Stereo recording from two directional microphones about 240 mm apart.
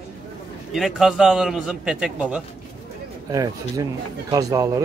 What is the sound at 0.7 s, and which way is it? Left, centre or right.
A man's voice, centre.